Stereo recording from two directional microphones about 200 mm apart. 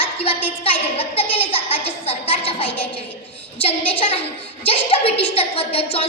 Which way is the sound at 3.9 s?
25° left (ahead or behind).